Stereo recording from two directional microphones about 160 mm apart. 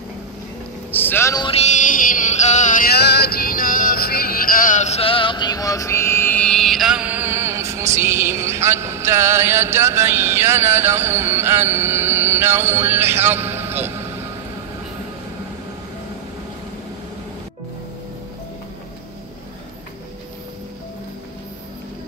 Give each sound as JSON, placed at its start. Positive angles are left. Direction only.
{"t": 0.9, "sound": "a man's voice", "side_deg": 15}
{"t": 1.4, "sound": "music", "side_deg": 40}
{"t": 3.2, "sound": "music", "side_deg": 70}